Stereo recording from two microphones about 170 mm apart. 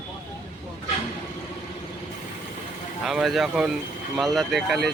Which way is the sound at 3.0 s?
Centre (ahead or behind).